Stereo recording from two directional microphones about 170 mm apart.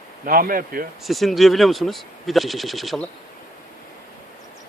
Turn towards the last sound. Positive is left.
turn(degrees=0)  # may be behind; listen again after turning